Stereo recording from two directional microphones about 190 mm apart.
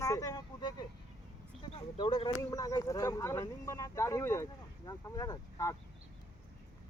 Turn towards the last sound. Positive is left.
turn(degrees=20)  # may be behind; listen again after turning